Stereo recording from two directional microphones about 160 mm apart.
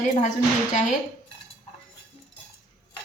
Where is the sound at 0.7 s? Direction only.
50° left (ahead or behind).